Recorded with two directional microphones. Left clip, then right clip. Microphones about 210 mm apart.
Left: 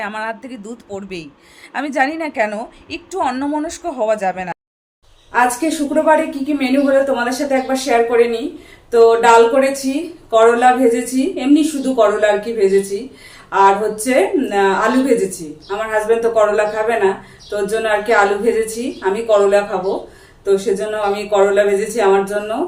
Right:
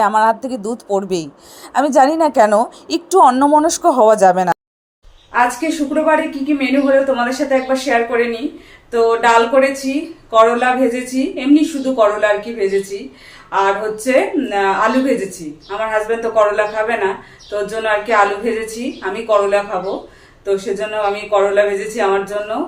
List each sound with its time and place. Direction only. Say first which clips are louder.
0.0 s a woman's voice: right 11 dB; 25° right (ahead or behind)
5.3 s speech: even; 5° left (ahead or behind)